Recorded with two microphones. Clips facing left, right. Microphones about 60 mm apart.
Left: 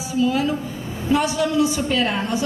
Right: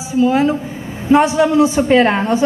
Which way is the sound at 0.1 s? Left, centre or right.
Right.